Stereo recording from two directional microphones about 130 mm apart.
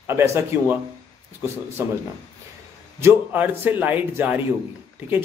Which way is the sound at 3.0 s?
15° right (ahead or behind).